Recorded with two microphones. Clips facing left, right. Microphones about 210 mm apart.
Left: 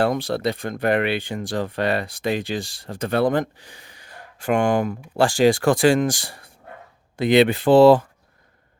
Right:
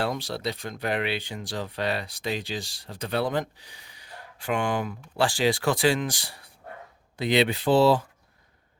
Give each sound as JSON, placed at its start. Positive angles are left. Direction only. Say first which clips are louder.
{"t": 0.0, "sound": "speech", "louder": "left 8 dB", "side_deg": 50}